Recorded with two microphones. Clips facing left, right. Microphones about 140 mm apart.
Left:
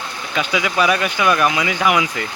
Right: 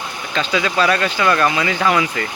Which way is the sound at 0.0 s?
15° right (ahead or behind).